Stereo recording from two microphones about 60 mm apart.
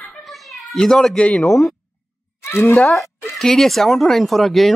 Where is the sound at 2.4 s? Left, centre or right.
Left.